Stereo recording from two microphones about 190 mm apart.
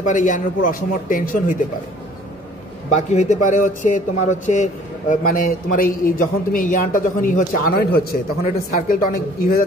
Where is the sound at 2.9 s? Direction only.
35° left (ahead or behind); by 7.9 s 55° left (ahead or behind).